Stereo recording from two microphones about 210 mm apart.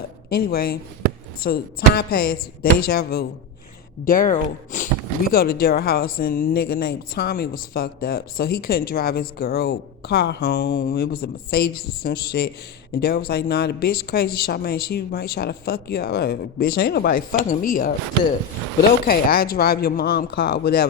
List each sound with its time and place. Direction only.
0.3 s speech: 45° left (ahead or behind)
19.0 s speech: 45° left (ahead or behind)